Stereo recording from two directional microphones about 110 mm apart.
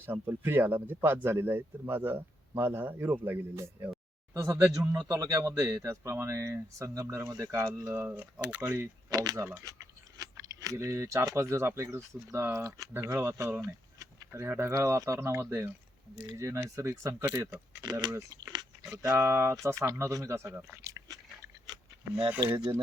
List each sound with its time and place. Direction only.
0.0 s speech: 20° right (ahead or behind)
9.0 s speech: 35° right (ahead or behind)
14.3 s speech: 20° right (ahead or behind)
17.3 s speech: 15° right (ahead or behind)
17.8 s speech: 40° right (ahead or behind)
19.1 s speech: 20° right (ahead or behind)
19.6 s chewing: 25° right (ahead or behind)